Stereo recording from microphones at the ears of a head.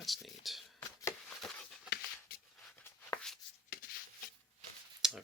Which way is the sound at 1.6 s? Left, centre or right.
Left.